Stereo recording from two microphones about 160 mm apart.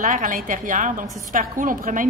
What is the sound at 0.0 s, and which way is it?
A woman's voice, 55° right (ahead or behind).